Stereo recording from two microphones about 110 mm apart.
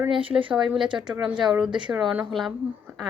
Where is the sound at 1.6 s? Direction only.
45° right (ahead or behind).